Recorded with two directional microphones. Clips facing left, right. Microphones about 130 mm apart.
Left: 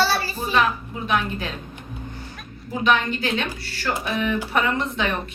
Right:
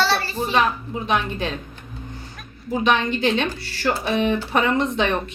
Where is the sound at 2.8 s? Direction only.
20° right (ahead or behind).